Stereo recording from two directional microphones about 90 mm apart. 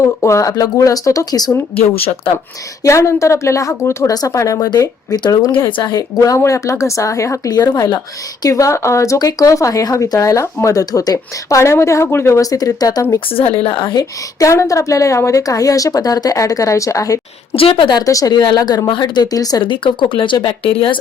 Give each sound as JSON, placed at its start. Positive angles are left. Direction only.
{"t": 0.0, "sound": "speech", "side_deg": 35}
{"t": 2.0, "sound": "speech", "side_deg": 90}
{"t": 2.8, "sound": "speech", "side_deg": 35}
{"t": 13.7, "sound": "speech", "side_deg": 70}
{"t": 13.9, "sound": "speech", "side_deg": 40}
{"t": 17.5, "sound": "a woman's voice", "side_deg": 90}
{"t": 18.0, "sound": "speech", "side_deg": 40}
{"t": 18.3, "sound": "speech", "side_deg": 55}
{"t": 19.6, "sound": "speech", "side_deg": 65}